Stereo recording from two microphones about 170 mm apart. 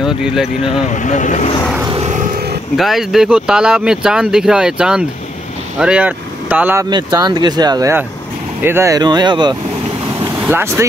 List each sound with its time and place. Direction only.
0.0 s speech: 5° right (ahead or behind)
0.8 s speech: 45° left (ahead or behind)
1.9 s vehicle: 40° right (ahead or behind)
2.8 s speech: centre (ahead or behind)
6.9 s speech: 25° right (ahead or behind)
10.4 s speech: 15° right (ahead or behind)